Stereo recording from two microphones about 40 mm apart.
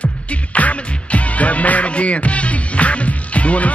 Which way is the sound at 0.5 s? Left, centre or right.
Left.